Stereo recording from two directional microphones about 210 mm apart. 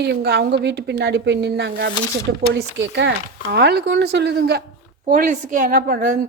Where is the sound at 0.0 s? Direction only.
50° right (ahead or behind).